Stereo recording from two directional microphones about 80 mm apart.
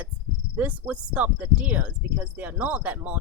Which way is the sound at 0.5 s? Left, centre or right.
Centre.